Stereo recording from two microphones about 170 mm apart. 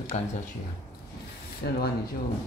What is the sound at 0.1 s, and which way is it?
Speech, 40° left (ahead or behind).